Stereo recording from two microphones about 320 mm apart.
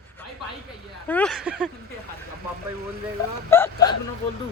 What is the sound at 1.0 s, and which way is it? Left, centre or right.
Speech, centre.